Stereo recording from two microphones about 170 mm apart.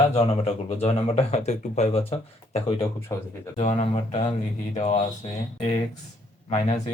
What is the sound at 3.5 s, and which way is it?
Speech, 35° left (ahead or behind).